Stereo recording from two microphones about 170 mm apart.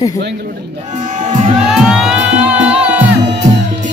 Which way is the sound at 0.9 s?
45° right (ahead or behind).